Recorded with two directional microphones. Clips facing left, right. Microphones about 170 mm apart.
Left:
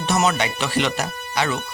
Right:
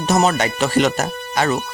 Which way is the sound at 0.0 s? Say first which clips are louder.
Right 4 dB; 40° right (ahead or behind).